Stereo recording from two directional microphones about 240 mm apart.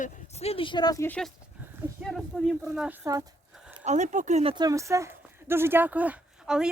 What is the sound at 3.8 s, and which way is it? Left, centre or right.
Speech, right.